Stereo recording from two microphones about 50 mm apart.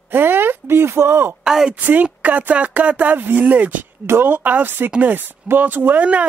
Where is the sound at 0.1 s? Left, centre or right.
Right.